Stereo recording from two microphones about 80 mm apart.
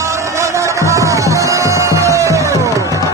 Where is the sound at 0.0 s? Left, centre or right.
Right.